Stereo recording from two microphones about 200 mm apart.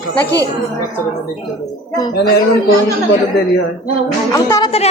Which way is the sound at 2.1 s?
55° left (ahead or behind).